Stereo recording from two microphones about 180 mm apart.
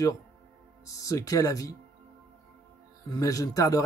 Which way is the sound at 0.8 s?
20° left (ahead or behind).